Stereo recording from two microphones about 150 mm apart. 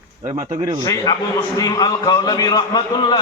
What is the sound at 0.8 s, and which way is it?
A man's voice, 25° left (ahead or behind).